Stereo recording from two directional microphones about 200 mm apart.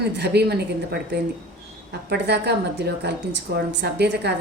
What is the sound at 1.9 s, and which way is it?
A woman's voice, 55° right (ahead or behind).